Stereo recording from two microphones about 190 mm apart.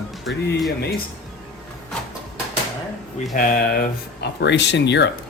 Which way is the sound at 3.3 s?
45° left (ahead or behind).